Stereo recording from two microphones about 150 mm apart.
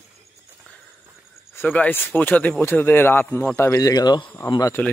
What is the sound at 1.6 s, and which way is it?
A man's voice, 10° left (ahead or behind).